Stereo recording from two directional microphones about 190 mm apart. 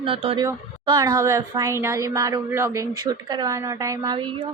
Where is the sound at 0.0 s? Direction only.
30° right (ahead or behind).